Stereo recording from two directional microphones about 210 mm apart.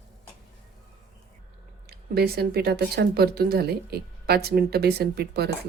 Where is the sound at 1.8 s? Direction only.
50° right (ahead or behind).